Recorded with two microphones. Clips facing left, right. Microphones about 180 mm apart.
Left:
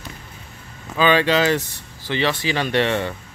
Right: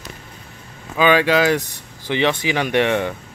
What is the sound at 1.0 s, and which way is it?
Speech, 10° right (ahead or behind).